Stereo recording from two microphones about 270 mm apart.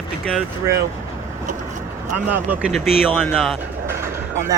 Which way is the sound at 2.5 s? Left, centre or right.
Centre.